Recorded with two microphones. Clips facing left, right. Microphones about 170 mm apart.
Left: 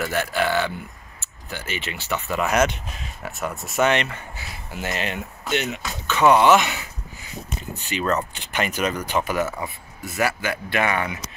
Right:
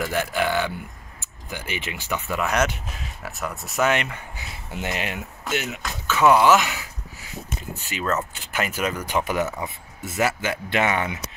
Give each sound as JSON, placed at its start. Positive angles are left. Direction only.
{"t": 0.0, "sound": "speech", "side_deg": -15}
{"t": 2.4, "sound": "speech", "side_deg": 5}
{"t": 8.0, "sound": "speech", "side_deg": 0}